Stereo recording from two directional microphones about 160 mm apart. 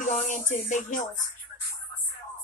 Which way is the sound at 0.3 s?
50° left (ahead or behind).